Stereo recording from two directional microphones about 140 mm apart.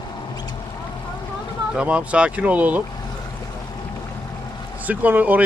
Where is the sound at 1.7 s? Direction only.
10° right (ahead or behind).